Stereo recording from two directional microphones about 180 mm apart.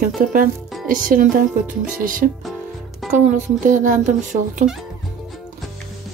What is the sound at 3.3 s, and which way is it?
Speech, 45° right (ahead or behind).